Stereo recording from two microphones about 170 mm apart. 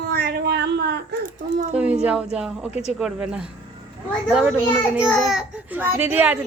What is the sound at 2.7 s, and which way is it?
Speech, 40° left (ahead or behind).